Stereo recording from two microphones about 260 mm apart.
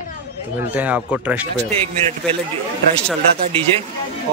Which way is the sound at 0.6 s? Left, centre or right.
Centre.